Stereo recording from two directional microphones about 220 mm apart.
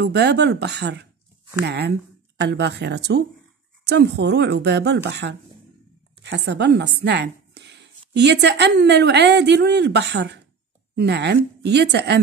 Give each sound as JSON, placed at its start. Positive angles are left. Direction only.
{"t": 0.0, "sound": "a woman's voice", "side_deg": -50}